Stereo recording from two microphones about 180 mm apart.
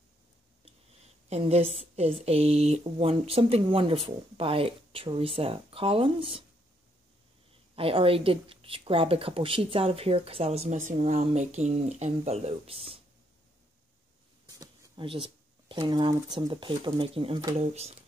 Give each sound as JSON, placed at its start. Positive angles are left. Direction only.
{"t": 1.3, "sound": "speech", "side_deg": -35}
{"t": 7.7, "sound": "speech", "side_deg": -30}
{"t": 14.5, "sound": "a sound", "side_deg": -20}
{"t": 16.3, "sound": "speech", "side_deg": -25}
{"t": 17.6, "sound": "speech", "side_deg": -35}